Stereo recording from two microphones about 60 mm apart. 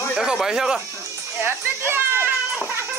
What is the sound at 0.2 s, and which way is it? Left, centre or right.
Speech, centre.